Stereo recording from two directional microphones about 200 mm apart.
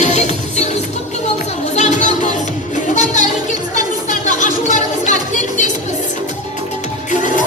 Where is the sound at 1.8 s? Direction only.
35° left (ahead or behind).